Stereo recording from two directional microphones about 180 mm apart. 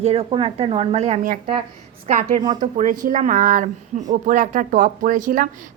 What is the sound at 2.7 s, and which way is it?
Speech, 50° right (ahead or behind).